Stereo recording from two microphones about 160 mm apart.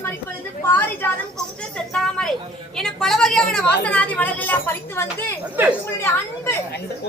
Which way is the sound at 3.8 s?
10° left (ahead or behind).